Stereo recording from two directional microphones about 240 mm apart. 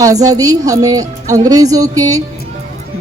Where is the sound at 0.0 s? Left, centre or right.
Centre.